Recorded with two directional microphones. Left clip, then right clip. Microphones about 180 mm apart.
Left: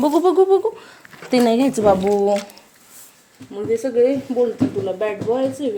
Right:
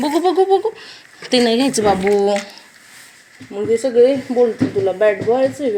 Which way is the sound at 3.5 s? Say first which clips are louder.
Right 4 dB; 15° right (ahead or behind).